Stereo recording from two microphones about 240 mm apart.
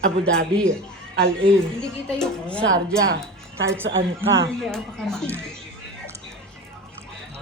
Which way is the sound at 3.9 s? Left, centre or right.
Right.